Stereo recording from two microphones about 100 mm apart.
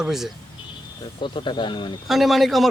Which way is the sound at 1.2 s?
55° left (ahead or behind).